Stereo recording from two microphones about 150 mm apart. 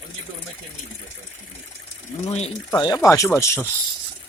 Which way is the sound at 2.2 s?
45° left (ahead or behind).